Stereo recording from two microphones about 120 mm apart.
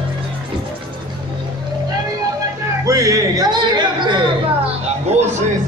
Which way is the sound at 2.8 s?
30° right (ahead or behind).